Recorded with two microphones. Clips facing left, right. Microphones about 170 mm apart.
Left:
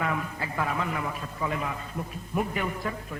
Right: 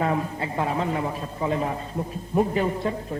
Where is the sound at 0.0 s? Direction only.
30° right (ahead or behind).